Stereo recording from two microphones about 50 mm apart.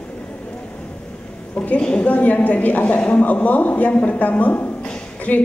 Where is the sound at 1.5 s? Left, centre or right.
Left.